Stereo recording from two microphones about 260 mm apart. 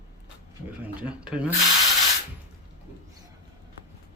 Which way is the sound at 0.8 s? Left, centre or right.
Centre.